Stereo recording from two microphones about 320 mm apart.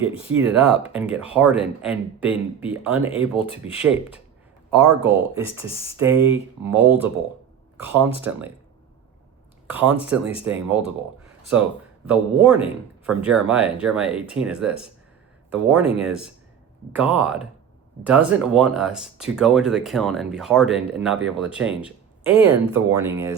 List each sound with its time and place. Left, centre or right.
0.0 s speech: centre
0.3 s speech: centre
9.6 s speech: centre
12.0 s speech: centre